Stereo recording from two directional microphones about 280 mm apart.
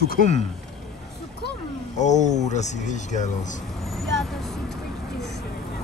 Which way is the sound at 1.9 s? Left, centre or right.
Left.